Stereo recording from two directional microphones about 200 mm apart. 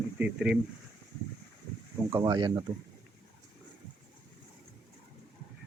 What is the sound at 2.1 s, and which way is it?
Speech, 15° right (ahead or behind).